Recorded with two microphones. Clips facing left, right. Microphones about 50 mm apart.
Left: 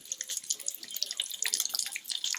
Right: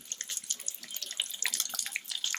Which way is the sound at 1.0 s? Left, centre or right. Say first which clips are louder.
Right 2 dB; right.